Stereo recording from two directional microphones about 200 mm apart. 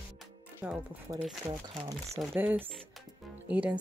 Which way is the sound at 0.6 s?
10° right (ahead or behind).